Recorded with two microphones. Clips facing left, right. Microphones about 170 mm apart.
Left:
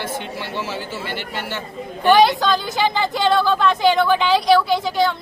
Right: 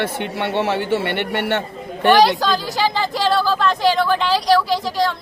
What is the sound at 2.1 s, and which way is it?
Speech, centre (ahead or behind).